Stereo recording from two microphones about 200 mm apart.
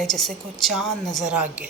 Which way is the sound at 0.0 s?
Centre (ahead or behind).